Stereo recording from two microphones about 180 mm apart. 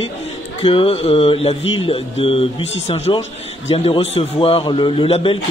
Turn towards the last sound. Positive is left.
turn(degrees=30)  # may be behind; listen again after turning